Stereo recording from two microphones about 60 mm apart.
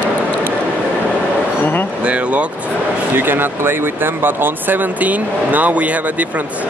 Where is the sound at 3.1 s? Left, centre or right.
Right.